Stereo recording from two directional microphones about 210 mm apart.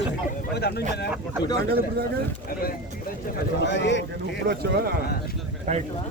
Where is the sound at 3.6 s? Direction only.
55° left (ahead or behind).